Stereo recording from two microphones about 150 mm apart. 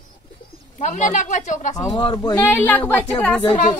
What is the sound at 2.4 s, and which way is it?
Speech, 15° left (ahead or behind).